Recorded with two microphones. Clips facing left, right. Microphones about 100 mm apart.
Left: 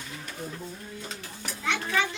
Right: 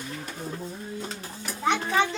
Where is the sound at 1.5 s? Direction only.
35° right (ahead or behind).